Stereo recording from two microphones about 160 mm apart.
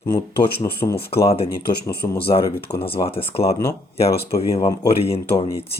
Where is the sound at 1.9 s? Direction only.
80° left.